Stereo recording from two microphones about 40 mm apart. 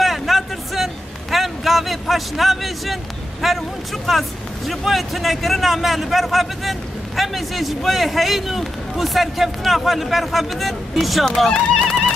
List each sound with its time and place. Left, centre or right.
0.0 s a sound: centre
3.4 s speech: centre
11.4 s speech: centre